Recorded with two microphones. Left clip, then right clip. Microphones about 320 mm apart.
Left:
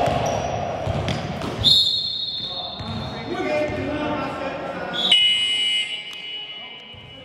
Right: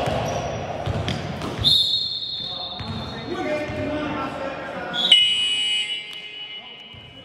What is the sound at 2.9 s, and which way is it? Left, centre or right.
Basketball bounce, centre.